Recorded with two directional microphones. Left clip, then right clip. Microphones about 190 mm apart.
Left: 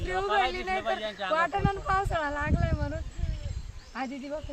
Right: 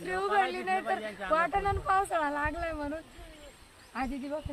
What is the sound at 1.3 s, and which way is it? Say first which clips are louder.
Speech: even; 5° left (ahead or behind).